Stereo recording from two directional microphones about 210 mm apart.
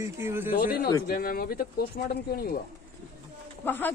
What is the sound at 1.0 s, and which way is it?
Speech, 45° left (ahead or behind).